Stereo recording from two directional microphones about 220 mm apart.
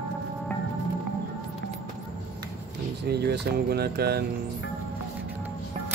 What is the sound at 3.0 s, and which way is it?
Speech, 45° right (ahead or behind).